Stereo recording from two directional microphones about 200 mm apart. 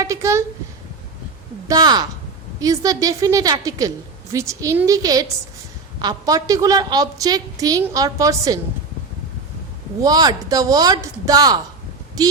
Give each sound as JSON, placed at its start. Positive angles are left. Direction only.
{"t": 0.0, "sound": "a sound", "side_deg": -15}
{"t": 1.6, "sound": "a woman's voice", "side_deg": -20}
{"t": 10.0, "sound": "speech", "side_deg": -20}